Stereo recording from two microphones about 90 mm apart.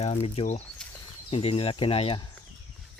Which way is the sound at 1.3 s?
90° left.